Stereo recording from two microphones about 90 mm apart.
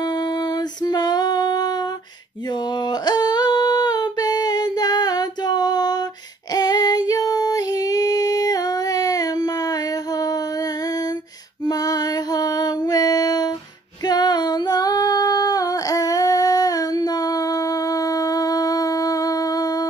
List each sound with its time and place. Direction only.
0.0 s female singing: 55° left (ahead or behind)
2.7 s a sound: 50° left (ahead or behind)
6.5 s female singing: 50° left (ahead or behind)
11.6 s music: 45° left (ahead or behind)
14.0 s female singing: 50° left (ahead or behind)